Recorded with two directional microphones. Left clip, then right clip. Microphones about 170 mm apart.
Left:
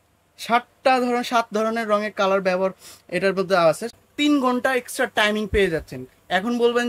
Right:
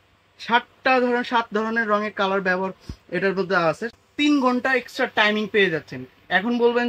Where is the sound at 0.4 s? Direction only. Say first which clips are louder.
Left 1 dB; 60° left (ahead or behind).